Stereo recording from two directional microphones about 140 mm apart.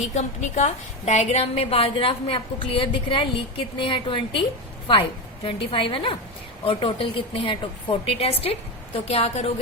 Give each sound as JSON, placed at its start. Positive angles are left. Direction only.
{"t": 0.1, "sound": "a woman's voice", "side_deg": 55}